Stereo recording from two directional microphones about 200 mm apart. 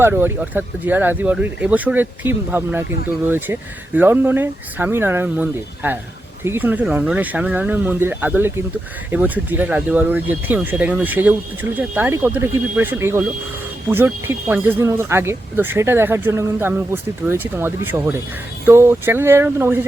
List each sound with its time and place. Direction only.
0.0 s speech: 10° right (ahead or behind)